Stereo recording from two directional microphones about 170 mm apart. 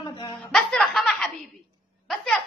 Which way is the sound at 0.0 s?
25° left (ahead or behind).